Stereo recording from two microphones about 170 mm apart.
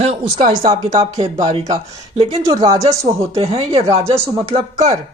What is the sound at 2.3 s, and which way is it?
Speech, 20° right (ahead or behind).